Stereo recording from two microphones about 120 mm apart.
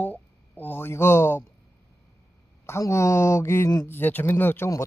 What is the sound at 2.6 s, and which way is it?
Speech, 20° left (ahead or behind).